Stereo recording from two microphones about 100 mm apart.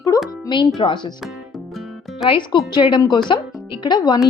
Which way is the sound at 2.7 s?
50° left (ahead or behind).